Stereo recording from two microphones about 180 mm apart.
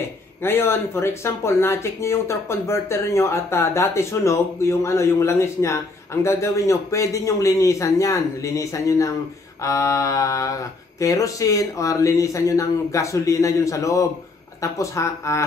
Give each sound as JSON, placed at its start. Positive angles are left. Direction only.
{"t": 0.4, "sound": "speech", "side_deg": 15}